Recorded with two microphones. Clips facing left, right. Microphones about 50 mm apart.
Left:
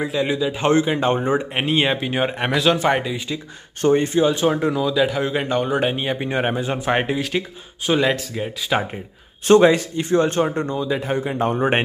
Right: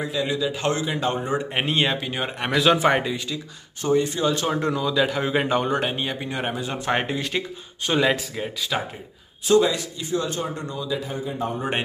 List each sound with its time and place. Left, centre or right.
0.0 s a man's voice: left
1.5 s speech: centre
2.5 s speech: centre
3.8 s speech: left
4.1 s speech: centre
5.7 s speech: centre
6.1 s a man's voice: left
6.8 s speech: centre
8.7 s a man's voice: left
9.5 s speech: left
11.1 s a man's voice: left